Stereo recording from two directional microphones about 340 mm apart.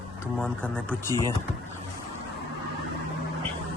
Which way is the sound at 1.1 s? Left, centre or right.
Centre.